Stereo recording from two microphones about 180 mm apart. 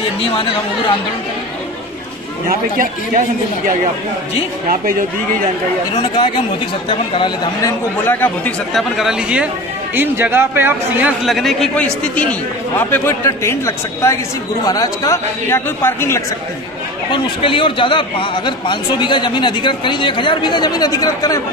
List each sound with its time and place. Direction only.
2.4 s a man's voice: 50° right (ahead or behind)
5.9 s a man's voice: 25° left (ahead or behind)
8.0 s speech: 10° left (ahead or behind)
8.7 s speech: centre (ahead or behind)
11.2 s speech: centre (ahead or behind)
17.1 s a man's voice: 30° left (ahead or behind)